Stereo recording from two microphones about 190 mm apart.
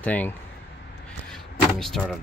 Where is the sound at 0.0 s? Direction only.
10° left (ahead or behind).